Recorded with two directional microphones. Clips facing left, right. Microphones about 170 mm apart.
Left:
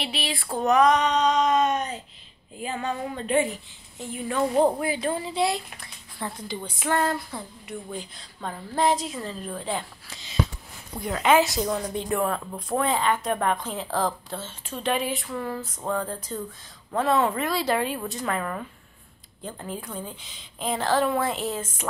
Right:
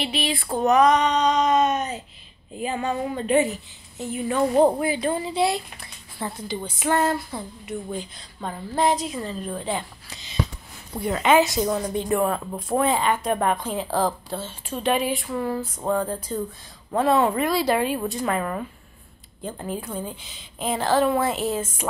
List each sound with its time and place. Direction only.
0.0 s speech: centre (ahead or behind)
2.5 s speech: 15° right (ahead or behind)
6.9 s a sound: 20° right (ahead or behind)
7.6 s speech: centre (ahead or behind)